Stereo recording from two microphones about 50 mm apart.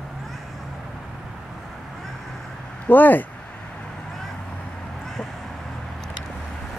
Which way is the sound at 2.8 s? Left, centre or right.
Left.